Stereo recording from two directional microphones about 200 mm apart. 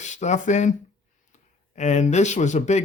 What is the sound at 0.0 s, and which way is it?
Speech, 35° left (ahead or behind).